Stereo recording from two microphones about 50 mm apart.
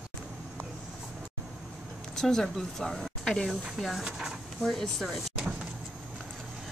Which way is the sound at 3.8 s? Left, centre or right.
Centre.